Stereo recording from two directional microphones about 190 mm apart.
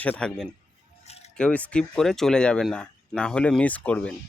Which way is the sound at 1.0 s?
35° left (ahead or behind).